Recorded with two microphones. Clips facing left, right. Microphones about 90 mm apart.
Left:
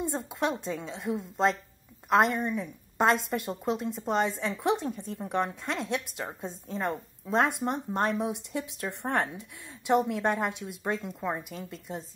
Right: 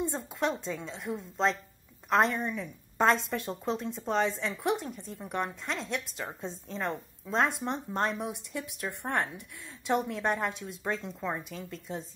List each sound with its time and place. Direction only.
0.0 s a woman's voice: 15° left (ahead or behind)
4.4 s speech: 20° left (ahead or behind)
6.7 s a woman's voice: 5° left (ahead or behind)
7.2 s a woman's voice: 15° left (ahead or behind)